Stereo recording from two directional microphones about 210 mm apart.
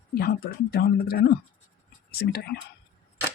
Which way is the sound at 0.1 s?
45° left (ahead or behind).